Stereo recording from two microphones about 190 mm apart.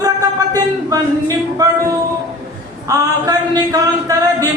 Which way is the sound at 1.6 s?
20° right (ahead or behind).